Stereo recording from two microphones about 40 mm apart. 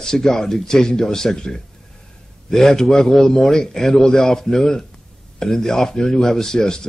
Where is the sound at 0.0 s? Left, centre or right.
Centre.